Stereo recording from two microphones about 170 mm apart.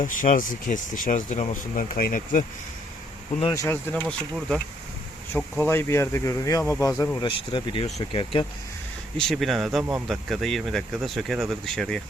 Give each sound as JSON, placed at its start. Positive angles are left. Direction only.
{"t": 0.0, "sound": "speech", "side_deg": 50}
{"t": 3.5, "sound": "speech", "side_deg": 15}
{"t": 7.2, "sound": "speech", "side_deg": 30}
{"t": 9.1, "sound": "speech", "side_deg": 0}